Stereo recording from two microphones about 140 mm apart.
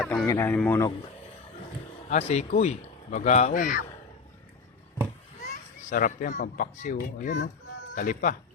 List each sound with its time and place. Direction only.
0.0 s a sound: 5° left (ahead or behind)
0.3 s speech: 15° left (ahead or behind)
2.0 s speech: 55° left (ahead or behind); by 3.8 s 70° left (ahead or behind)
5.9 s speech: 70° left (ahead or behind)